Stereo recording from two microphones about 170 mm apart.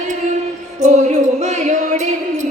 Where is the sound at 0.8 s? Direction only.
45° right (ahead or behind).